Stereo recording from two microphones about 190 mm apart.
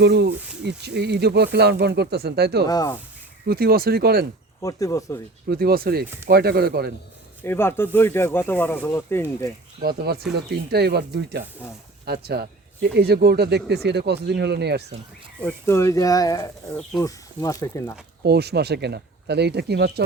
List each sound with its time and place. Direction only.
0.0 s speech: 60° right (ahead or behind)
2.6 s speech: 20° left (ahead or behind)
3.4 s speech: 55° right (ahead or behind)
4.6 s speech: 15° left (ahead or behind)
5.5 s speech: 50° right (ahead or behind)
7.4 s speech: 10° left (ahead or behind)
9.8 s speech: 55° right (ahead or behind)
15.4 s speech: 10° left (ahead or behind)
18.2 s speech: 60° right (ahead or behind)